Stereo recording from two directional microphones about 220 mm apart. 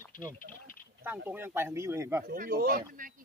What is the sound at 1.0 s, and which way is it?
Speech, 10° right (ahead or behind).